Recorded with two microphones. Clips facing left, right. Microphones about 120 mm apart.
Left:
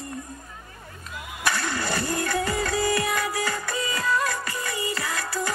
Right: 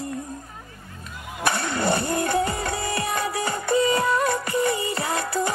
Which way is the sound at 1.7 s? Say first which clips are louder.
Right 4 dB; 25° right (ahead or behind).